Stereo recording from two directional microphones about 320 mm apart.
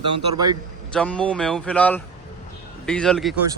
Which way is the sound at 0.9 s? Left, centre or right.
Centre.